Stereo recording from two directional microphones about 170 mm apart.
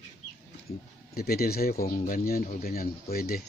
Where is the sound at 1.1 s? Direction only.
65° left (ahead or behind).